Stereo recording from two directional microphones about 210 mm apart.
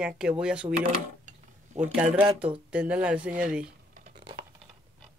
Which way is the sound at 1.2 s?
35° right (ahead or behind).